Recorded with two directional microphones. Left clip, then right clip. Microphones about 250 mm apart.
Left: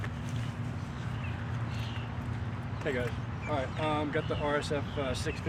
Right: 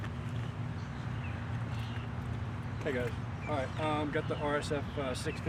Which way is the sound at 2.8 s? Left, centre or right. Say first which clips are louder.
Left 2 dB; centre.